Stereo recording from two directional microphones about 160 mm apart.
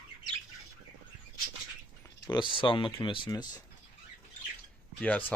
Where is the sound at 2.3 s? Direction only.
30° left (ahead or behind).